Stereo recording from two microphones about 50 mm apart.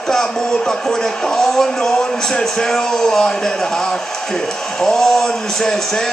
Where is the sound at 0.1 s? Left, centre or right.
Centre.